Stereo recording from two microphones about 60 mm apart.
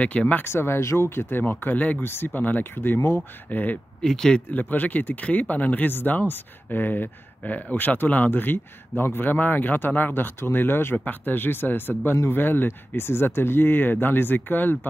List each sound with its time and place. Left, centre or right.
0.0 s speech: left
0.4 s speech: left
4.0 s speech: centre
4.5 s speech: left